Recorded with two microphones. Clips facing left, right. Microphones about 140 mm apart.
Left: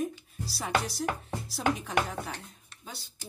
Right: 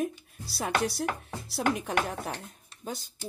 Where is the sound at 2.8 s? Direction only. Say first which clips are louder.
Right 8 dB; 50° right (ahead or behind).